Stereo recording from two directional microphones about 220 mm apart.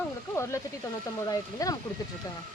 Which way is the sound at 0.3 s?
15° left (ahead or behind).